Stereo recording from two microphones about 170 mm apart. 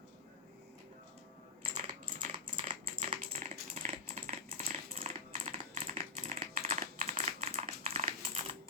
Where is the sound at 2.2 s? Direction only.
45° right (ahead or behind).